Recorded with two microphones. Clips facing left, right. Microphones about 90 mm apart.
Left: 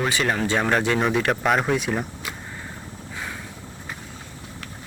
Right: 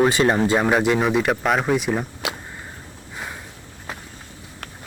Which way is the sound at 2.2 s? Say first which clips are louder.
Right 6 dB; 90° right.